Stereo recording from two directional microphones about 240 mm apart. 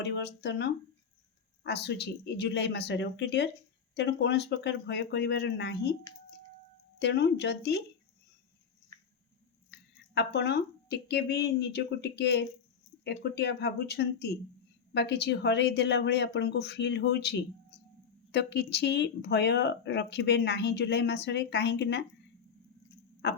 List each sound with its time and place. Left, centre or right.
0.0 s speech: left
7.0 s speech: left
8.9 s a sound: centre
9.6 s speech: left
23.2 s speech: left